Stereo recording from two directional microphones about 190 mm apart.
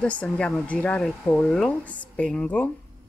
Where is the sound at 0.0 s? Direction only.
5° left (ahead or behind).